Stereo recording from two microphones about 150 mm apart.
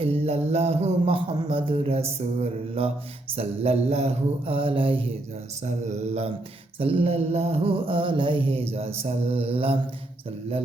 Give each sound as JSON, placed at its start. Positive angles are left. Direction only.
{"t": 0.0, "sound": "mantra", "side_deg": -40}